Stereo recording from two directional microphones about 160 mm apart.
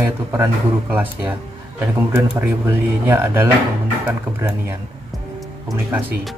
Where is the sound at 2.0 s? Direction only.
15° right (ahead or behind).